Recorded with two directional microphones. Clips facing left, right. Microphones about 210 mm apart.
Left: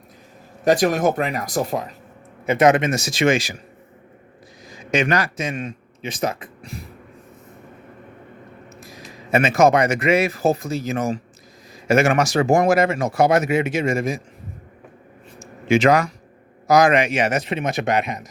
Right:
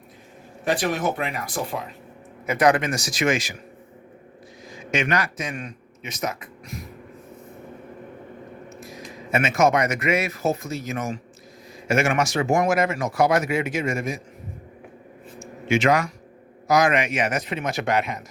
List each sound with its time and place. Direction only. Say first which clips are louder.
0.6 s speech: left 6 dB; 40° left (ahead or behind)
2.5 s a man's voice: left 4 dB; 25° left (ahead or behind)
4.9 s speech: left 4 dB; 35° left (ahead or behind)
9.3 s speech: left 4 dB; 35° left (ahead or behind)
15.4 s a sound: left 5 dB; 35° left (ahead or behind)
16.6 s a man's voice: left 4 dB; 35° left (ahead or behind); by 18.3 s 20° left (ahead or behind)